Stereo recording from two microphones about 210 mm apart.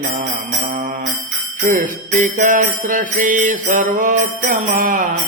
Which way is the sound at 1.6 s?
40° right (ahead or behind).